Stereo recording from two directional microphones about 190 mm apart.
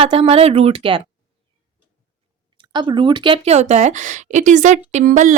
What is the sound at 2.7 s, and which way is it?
A woman's voice, 25° right (ahead or behind).